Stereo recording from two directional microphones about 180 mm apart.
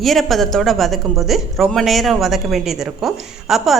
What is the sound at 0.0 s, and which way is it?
A woman's voice, centre (ahead or behind).